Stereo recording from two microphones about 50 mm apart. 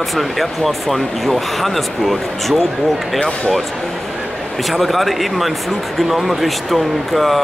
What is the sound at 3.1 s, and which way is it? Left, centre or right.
Speech, left.